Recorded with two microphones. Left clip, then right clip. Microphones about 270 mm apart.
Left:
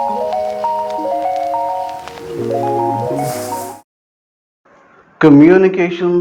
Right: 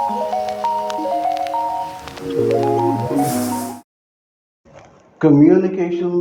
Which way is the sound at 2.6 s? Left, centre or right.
Centre.